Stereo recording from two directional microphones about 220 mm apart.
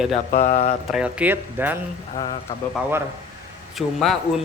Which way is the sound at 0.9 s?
5° right (ahead or behind).